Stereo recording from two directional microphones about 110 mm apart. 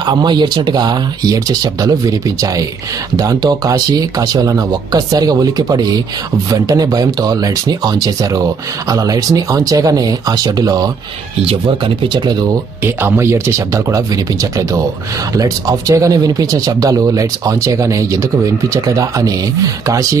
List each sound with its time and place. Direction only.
0.0 s speech: 40° right (ahead or behind)
11.4 s speech: 55° right (ahead or behind)
12.8 s speech: 20° right (ahead or behind)